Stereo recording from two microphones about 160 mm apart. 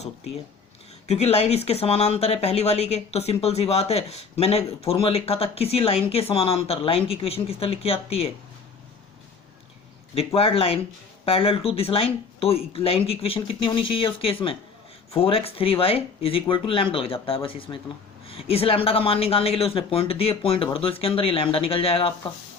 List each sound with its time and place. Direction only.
1.0 s speech: 40° left (ahead or behind)
10.2 s speech: 35° left (ahead or behind)